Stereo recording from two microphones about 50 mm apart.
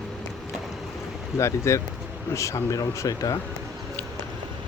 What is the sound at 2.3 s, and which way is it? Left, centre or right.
Speech, left.